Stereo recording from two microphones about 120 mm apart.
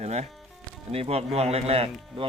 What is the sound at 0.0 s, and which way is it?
Speech, 65° right (ahead or behind).